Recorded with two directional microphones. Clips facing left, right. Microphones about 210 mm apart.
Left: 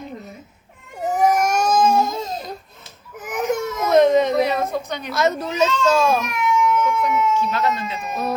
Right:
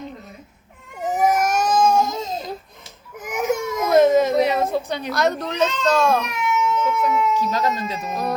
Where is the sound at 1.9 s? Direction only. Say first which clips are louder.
Even; 15° right (ahead or behind).